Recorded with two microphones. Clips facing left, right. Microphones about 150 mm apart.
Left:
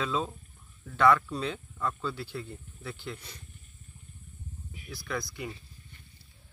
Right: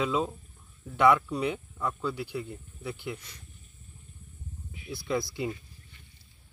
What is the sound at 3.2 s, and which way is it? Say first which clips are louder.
Speech: left 3 dB; 25° left (ahead or behind).